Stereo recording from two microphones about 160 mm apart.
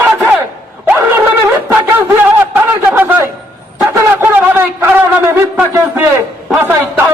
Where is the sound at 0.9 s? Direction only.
15° right (ahead or behind).